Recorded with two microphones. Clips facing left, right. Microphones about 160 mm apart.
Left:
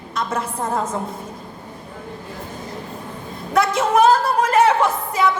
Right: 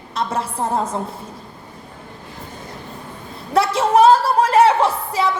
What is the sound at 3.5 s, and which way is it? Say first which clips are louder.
A woman's voice: right 2 dB; 30° right (ahead or behind).